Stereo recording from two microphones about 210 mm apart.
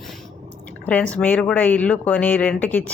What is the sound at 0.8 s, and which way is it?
Speech, 5° left (ahead or behind).